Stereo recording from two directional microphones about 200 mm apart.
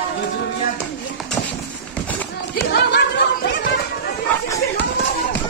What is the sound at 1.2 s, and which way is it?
Run, 5° left (ahead or behind).